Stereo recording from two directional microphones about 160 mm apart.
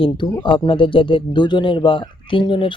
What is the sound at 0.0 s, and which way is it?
Speech, 30° left (ahead or behind).